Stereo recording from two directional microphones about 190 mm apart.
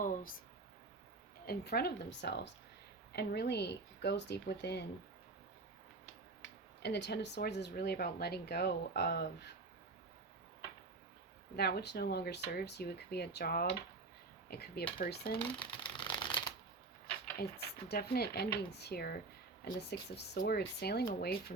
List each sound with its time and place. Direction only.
0.0 s a sound: 45° left (ahead or behind)
1.5 s speech: 55° left (ahead or behind)
6.8 s speech: 60° left (ahead or behind)
11.5 s speech: 55° left (ahead or behind)
15.5 s a sound: 25° left (ahead or behind)
17.3 s speech: 55° left (ahead or behind)